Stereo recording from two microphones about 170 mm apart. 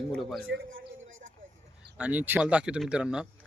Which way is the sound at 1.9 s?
10° right (ahead or behind).